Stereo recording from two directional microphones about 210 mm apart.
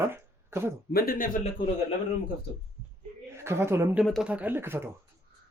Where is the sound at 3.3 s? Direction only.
10° right (ahead or behind).